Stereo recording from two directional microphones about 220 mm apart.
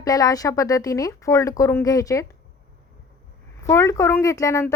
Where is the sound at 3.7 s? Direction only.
15° left (ahead or behind).